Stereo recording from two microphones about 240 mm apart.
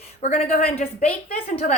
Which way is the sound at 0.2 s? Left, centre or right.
Left.